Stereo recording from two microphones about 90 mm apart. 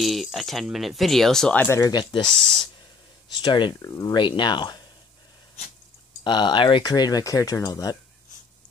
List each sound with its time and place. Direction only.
0.0 s speech: centre (ahead or behind)
1.9 s speech: 50° left (ahead or behind)
2.3 s speech: 5° left (ahead or behind)
3.3 s speech: 60° left (ahead or behind)
3.8 s speech: 45° left (ahead or behind)
4.1 s speech: 60° left (ahead or behind)
6.2 s speech: 60° left (ahead or behind)